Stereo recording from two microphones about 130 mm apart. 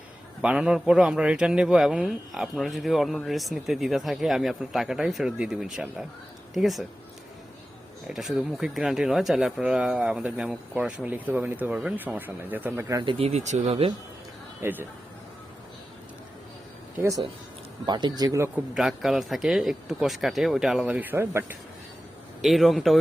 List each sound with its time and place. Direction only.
0.4 s speech: 5° right (ahead or behind)
8.0 s speech: centre (ahead or behind)
12.9 s speech: 30° right (ahead or behind)
13.1 s speech: 55° right (ahead or behind)
14.6 s speech: 15° right (ahead or behind)
17.8 s speech: 35° right (ahead or behind)
18.7 s speech: 5° right (ahead or behind)
22.4 s speech: centre (ahead or behind)